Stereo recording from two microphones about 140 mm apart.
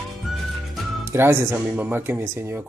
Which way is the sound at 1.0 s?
20° right (ahead or behind).